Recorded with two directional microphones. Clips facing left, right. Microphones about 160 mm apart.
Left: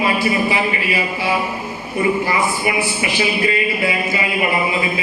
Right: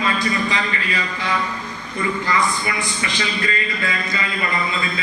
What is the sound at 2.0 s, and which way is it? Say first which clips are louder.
Speech: left 6 dB; 25° left (ahead or behind).